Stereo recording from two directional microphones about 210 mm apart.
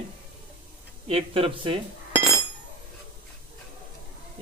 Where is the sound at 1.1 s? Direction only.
25° right (ahead or behind).